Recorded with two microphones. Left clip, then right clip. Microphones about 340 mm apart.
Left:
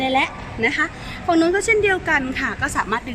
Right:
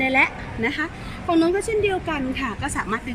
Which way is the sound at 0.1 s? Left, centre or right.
Left.